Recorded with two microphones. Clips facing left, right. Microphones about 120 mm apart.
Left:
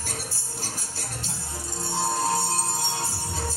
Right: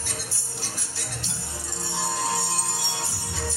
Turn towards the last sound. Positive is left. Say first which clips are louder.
# left 2 dB
turn(degrees=45)  # may be behind; listen again after turning